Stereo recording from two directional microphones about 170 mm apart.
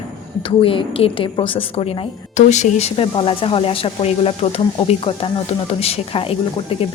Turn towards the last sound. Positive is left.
turn(degrees=35)  # may be behind; listen again after turning